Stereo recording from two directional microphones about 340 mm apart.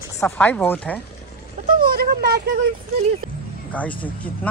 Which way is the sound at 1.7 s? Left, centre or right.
Right.